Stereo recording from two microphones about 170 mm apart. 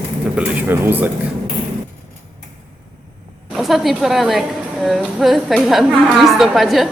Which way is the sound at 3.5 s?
Centre (ahead or behind).